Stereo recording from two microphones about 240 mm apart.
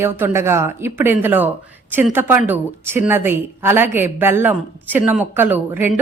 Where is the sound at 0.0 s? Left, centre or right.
Centre.